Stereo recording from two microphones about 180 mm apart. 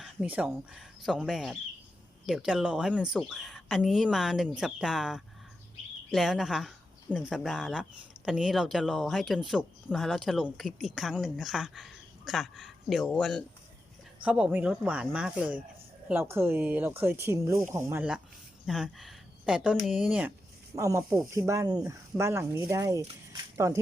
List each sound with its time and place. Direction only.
0.0 s speech: 5° right (ahead or behind)
14.3 s speech: 5° right (ahead or behind)
18.6 s speech: centre (ahead or behind)
20.7 s speech: 15° right (ahead or behind)